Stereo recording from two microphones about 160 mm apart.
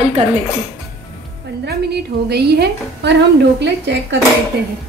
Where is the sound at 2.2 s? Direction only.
90° right.